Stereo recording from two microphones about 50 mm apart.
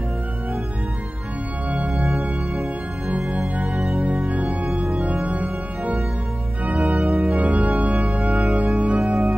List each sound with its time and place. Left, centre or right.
2.0 s music: centre
3.1 s music: right
6.6 s organ: right
7.7 s music: right